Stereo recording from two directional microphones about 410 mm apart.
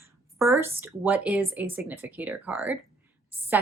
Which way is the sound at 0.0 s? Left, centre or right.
Centre.